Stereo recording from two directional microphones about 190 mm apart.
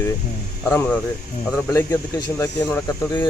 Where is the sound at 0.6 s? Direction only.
10° left (ahead or behind).